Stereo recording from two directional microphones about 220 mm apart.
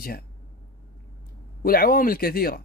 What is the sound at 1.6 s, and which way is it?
Speech, 40° left (ahead or behind).